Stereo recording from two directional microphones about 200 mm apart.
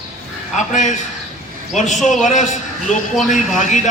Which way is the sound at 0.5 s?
40° left (ahead or behind).